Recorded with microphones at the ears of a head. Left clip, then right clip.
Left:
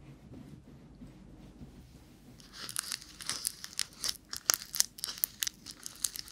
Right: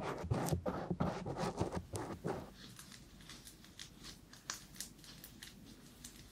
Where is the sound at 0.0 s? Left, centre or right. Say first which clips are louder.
Right 14 dB; right.